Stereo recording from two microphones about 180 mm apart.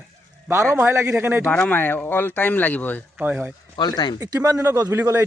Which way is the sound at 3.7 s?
25° left (ahead or behind).